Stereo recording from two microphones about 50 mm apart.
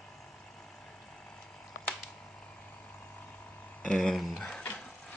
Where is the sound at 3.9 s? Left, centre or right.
Centre.